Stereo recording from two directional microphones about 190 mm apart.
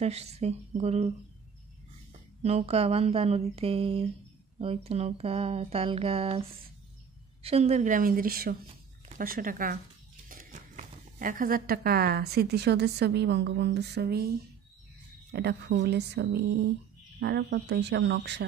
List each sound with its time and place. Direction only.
0.0 s speech: 35° right (ahead or behind)
2.4 s speech: 35° right (ahead or behind)
7.4 s a woman's voice: 35° right (ahead or behind); by 14.3 s 55° right (ahead or behind)
15.3 s speech: 60° right (ahead or behind)